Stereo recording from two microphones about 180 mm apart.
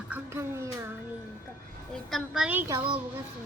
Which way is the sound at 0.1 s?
15° right (ahead or behind).